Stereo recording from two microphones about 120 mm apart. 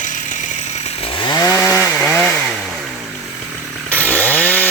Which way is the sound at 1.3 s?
30° left (ahead or behind).